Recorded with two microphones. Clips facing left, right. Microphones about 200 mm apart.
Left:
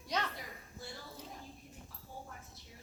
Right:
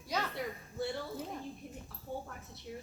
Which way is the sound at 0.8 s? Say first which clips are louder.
Right 13 dB; 65° right (ahead or behind).